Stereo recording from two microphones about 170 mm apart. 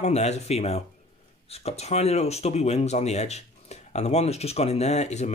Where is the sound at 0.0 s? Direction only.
40° left (ahead or behind).